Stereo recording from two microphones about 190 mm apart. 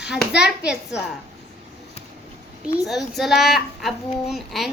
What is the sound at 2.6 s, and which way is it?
A child's voice, centre (ahead or behind).